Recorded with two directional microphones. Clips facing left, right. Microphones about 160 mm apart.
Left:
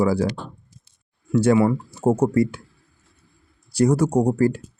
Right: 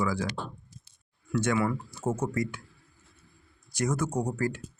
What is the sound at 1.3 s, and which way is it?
Speech, 30° left (ahead or behind).